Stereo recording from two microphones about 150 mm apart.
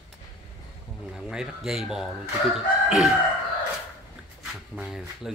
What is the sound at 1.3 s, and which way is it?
Speech, 5° right (ahead or behind).